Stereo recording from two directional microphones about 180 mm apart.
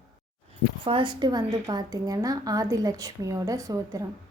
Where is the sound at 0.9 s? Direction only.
25° right (ahead or behind).